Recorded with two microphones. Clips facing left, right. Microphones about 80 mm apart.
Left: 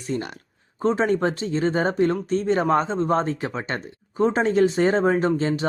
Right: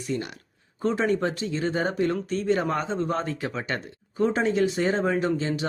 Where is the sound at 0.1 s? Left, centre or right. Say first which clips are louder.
Left 3 dB; left.